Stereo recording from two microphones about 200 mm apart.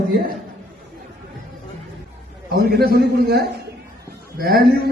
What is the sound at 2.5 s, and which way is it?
A man's voice, 50° right (ahead or behind).